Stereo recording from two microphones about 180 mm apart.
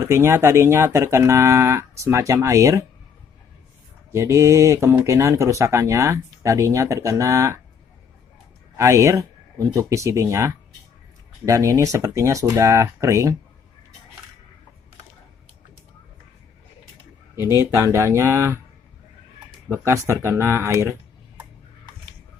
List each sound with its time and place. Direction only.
0.0 s speech: 15° right (ahead or behind)
4.1 s speech: 15° right (ahead or behind)
8.8 s speech: 15° right (ahead or behind)
17.5 s speech: 15° right (ahead or behind)
19.7 s speech: 15° right (ahead or behind)